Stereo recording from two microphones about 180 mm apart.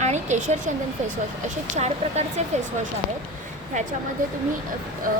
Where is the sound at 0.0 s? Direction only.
40° right (ahead or behind).